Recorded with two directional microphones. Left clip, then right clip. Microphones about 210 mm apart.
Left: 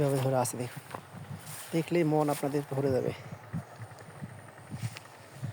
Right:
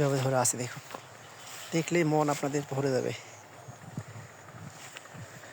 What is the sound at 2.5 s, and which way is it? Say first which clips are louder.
Speech: even; 10° left (ahead or behind).